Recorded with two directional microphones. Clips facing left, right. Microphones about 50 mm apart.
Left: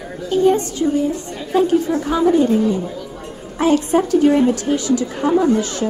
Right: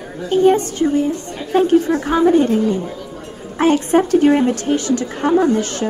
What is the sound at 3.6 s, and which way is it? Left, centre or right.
A woman's voice, right.